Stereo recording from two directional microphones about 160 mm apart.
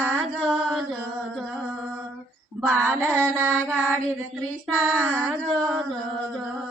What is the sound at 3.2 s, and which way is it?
Carnatic music, 10° left (ahead or behind).